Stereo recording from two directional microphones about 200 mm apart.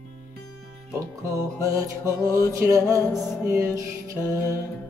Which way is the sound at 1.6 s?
15° right (ahead or behind).